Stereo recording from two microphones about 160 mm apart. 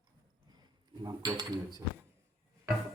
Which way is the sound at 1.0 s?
25° right (ahead or behind).